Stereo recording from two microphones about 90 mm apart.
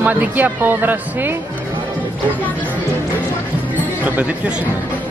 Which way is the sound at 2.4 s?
20° left (ahead or behind).